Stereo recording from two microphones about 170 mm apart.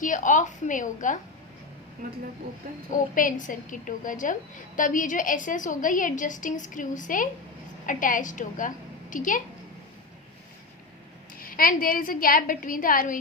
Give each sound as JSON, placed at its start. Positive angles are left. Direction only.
{"t": 0.0, "sound": "a woman's voice", "side_deg": 50}
{"t": 2.0, "sound": "speech", "side_deg": -60}
{"t": 2.9, "sound": "a woman's voice", "side_deg": 50}
{"t": 11.3, "sound": "a woman's voice", "side_deg": 55}